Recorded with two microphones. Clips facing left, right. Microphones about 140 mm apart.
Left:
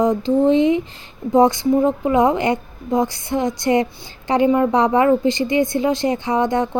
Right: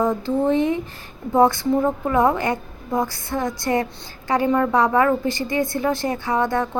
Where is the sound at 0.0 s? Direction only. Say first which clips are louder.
Left 4 dB; 15° left (ahead or behind).